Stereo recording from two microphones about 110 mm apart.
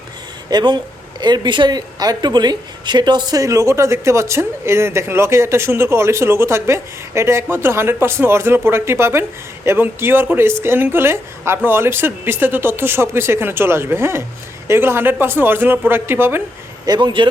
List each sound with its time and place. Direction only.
0.5 s a woman's voice: 40° right (ahead or behind); by 16.4 s 20° right (ahead or behind)
16.8 s speech: 40° right (ahead or behind)